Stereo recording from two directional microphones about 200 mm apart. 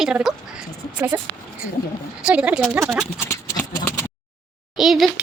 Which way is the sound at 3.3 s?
15° left (ahead or behind).